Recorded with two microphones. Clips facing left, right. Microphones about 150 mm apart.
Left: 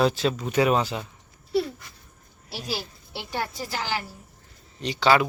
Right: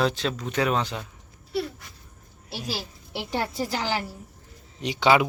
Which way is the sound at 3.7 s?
30° right (ahead or behind).